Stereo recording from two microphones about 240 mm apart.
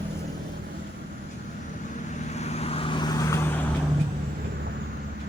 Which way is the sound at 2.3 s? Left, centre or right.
Left.